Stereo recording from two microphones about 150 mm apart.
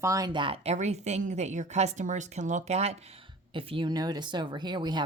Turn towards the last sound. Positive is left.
turn(degrees=-30)  # may be behind; listen again after turning